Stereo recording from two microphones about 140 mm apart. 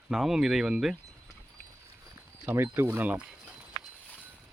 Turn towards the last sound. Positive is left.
turn(degrees=-5)  # may be behind; listen again after turning